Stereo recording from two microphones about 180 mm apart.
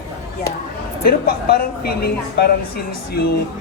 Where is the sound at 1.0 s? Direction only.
55° left (ahead or behind).